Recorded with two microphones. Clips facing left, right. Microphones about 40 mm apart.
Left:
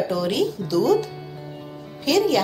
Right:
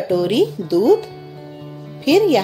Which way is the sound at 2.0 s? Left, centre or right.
Centre.